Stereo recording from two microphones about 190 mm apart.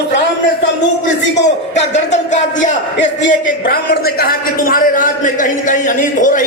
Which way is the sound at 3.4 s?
55° left (ahead or behind).